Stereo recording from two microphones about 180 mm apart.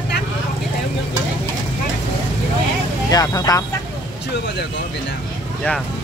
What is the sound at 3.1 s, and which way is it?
Speech, 20° left (ahead or behind).